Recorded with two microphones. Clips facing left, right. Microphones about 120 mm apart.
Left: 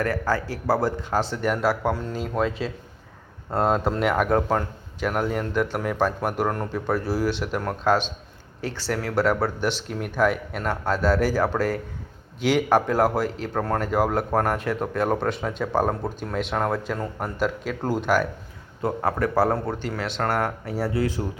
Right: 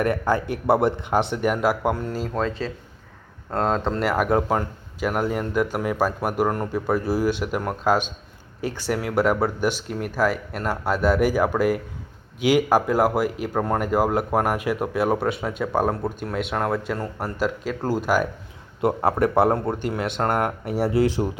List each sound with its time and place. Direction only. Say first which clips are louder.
0.0 s speech: right 3 dB; 20° right (ahead or behind)
2.3 s speech: left 4 dB; 5° left (ahead or behind)
18.8 s speech: right 4 dB; 25° right (ahead or behind)